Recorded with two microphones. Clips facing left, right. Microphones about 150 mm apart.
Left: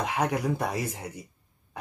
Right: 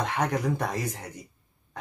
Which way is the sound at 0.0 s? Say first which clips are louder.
Even; 10° left (ahead or behind).